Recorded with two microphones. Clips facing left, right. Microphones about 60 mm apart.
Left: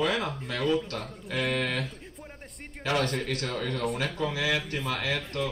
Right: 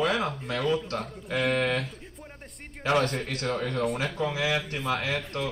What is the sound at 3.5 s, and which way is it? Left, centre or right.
Speech, right.